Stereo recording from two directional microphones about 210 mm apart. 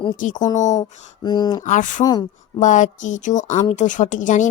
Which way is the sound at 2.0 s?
20° left (ahead or behind).